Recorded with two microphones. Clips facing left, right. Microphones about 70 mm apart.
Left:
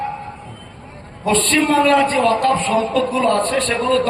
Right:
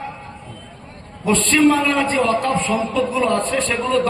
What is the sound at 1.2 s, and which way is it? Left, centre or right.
A man's voice, left.